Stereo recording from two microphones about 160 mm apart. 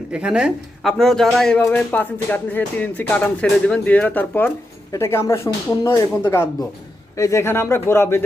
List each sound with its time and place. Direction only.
0.1 s speech: 5° right (ahead or behind); by 8.2 s 15° left (ahead or behind)